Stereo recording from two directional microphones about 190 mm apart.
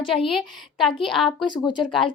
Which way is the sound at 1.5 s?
25° left (ahead or behind).